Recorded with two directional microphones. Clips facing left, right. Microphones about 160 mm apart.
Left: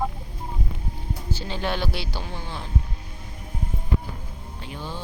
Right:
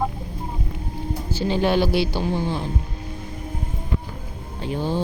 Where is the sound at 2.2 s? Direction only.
35° right (ahead or behind).